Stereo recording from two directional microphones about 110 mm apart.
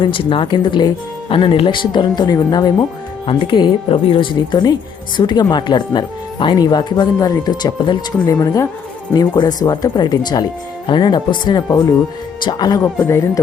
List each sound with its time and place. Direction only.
0.0 s speech: 50° left (ahead or behind)
3.2 s speech: 50° left (ahead or behind)
12.8 s speech: 25° left (ahead or behind)